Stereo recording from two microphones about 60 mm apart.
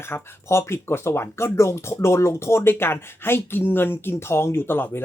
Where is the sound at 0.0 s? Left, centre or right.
Left.